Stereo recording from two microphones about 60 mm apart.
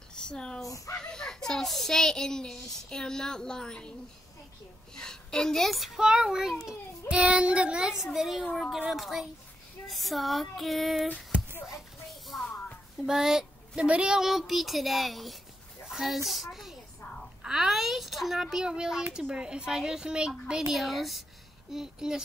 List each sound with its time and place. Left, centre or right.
0.1 s a sound: centre
0.7 s speech: left
0.9 s speech: centre
4.9 s a woman's voice: centre
5.9 s a woman's voice: centre
7.1 s a woman's voice: centre
12.3 s a sound: centre
13.0 s a child's voice: centre
17.4 s a sound: centre
19.1 s a woman's voice: centre